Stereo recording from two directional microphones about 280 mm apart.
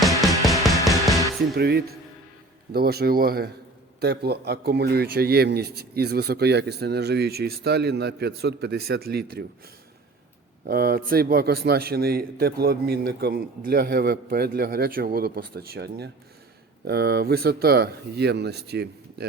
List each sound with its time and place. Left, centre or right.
0.0 s music: centre
1.4 s a man's voice: right
10.7 s a man's voice: right